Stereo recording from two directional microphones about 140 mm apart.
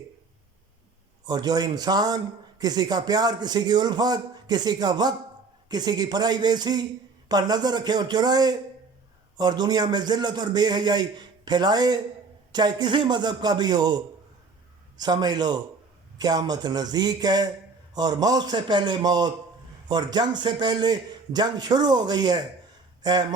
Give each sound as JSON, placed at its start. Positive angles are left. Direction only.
{"t": 1.2, "sound": "a man's voice", "side_deg": -30}